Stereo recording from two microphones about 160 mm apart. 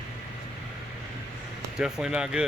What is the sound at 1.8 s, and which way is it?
Speech, 5° right (ahead or behind).